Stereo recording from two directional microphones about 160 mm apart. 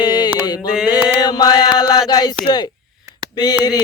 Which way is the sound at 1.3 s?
30° left (ahead or behind).